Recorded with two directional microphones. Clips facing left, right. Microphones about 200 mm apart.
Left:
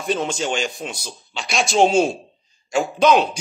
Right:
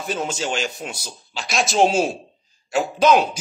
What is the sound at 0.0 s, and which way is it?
A man's voice, 5° right (ahead or behind).